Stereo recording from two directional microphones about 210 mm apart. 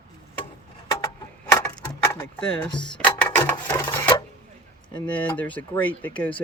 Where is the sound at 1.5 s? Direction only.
10° left (ahead or behind).